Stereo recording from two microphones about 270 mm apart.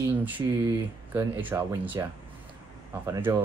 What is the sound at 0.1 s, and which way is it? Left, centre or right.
Speech, centre.